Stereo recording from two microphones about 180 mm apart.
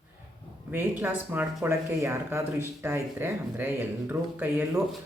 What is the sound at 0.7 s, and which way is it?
Speech, 10° right (ahead or behind).